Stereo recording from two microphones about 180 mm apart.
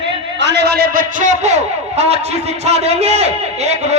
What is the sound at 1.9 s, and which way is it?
A man's voice, 35° right (ahead or behind).